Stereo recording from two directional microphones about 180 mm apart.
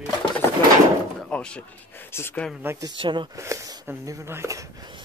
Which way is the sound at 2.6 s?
25° right (ahead or behind).